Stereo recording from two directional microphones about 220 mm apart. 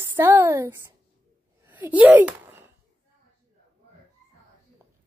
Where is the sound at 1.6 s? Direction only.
10° right (ahead or behind).